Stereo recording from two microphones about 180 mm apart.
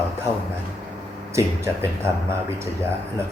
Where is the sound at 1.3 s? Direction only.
15° right (ahead or behind).